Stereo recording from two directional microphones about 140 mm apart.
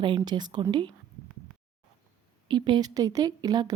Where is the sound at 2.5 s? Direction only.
35° right (ahead or behind).